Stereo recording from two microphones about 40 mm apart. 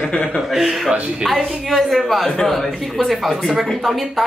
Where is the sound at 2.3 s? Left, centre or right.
Centre.